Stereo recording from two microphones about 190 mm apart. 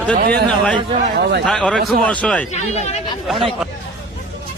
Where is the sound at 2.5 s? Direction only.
35° left (ahead or behind).